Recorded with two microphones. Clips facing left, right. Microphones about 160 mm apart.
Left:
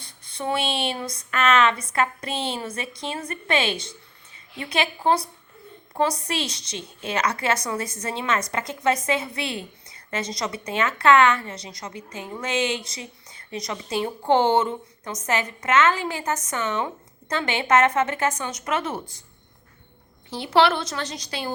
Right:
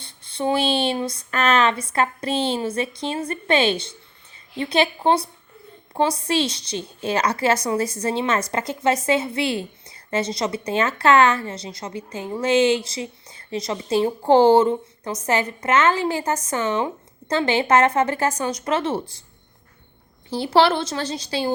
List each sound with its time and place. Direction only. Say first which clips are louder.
0.0 s a woman's voice: right 6 dB; 30° right (ahead or behind)
20.3 s a woman's voice: right 2 dB; 30° right (ahead or behind)